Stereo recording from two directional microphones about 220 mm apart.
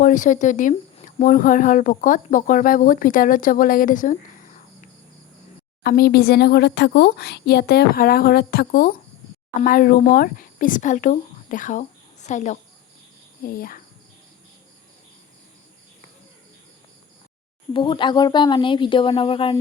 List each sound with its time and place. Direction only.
0.0 s speech: 35° left (ahead or behind)
5.8 s speech: 45° left (ahead or behind)
17.7 s a woman's voice: 20° left (ahead or behind)